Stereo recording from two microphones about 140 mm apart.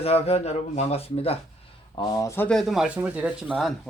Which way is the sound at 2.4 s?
5° left (ahead or behind).